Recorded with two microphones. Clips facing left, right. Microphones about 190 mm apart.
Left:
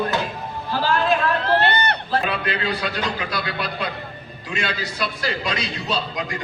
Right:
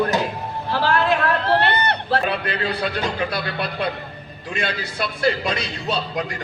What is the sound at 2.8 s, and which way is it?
A man's voice, 55° right (ahead or behind).